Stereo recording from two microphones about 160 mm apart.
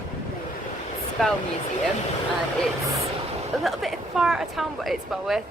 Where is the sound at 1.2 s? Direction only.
Centre (ahead or behind).